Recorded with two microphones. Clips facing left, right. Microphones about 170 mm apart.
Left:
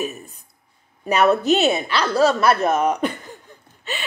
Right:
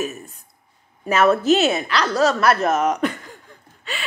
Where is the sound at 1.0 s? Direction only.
15° left (ahead or behind).